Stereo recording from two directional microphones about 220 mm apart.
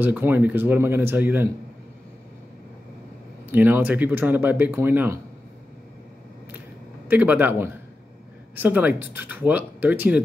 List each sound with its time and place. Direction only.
0.0 s speech: 10° right (ahead or behind)
3.5 s speech: 10° right (ahead or behind)
7.1 s speech: 10° right (ahead or behind)